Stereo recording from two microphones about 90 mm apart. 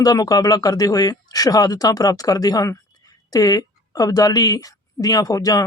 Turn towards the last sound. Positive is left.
turn(degrees=40)  # may be behind; listen again after turning